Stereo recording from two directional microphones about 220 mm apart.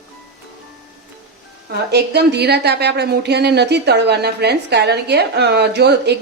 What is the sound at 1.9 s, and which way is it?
Speech, 50° right (ahead or behind).